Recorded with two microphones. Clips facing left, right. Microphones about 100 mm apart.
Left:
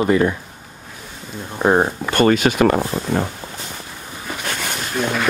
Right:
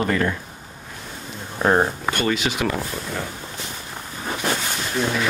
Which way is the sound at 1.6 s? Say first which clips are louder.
Left 3 dB; 15° left (ahead or behind).